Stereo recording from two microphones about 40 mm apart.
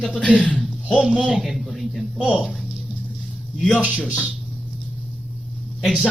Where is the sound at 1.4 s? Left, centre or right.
Centre.